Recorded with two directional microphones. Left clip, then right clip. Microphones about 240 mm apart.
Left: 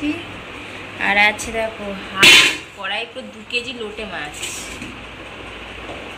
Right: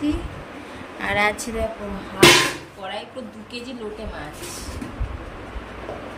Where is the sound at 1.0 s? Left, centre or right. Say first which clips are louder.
Left 6 dB; centre.